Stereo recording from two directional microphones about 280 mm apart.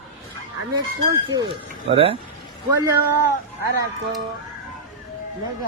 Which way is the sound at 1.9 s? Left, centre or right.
Centre.